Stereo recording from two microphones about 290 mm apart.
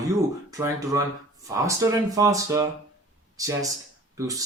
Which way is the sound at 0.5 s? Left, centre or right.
Centre.